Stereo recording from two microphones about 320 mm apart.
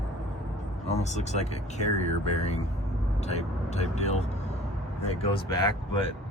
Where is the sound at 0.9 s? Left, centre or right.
Left.